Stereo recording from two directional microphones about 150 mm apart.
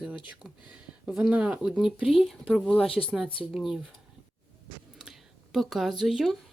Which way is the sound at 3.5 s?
Centre (ahead or behind).